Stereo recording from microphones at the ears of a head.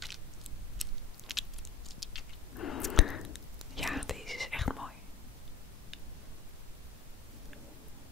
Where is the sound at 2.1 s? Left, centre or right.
Left.